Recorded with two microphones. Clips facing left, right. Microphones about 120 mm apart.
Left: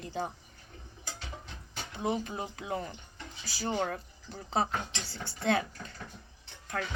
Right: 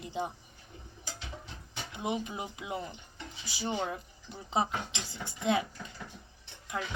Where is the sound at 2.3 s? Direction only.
15° right (ahead or behind).